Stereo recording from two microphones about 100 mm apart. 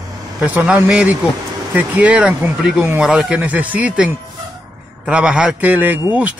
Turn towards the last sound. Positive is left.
turn(degrees=-15)  # may be behind; listen again after turning